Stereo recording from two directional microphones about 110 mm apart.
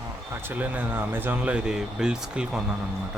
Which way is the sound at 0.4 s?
15° right (ahead or behind).